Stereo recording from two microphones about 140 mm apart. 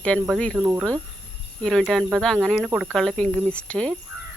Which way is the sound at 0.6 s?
20° right (ahead or behind).